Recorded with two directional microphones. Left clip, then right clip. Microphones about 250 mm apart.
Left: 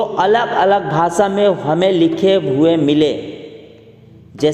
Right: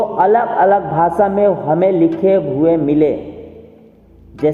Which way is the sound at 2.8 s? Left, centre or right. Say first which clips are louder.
Even; left.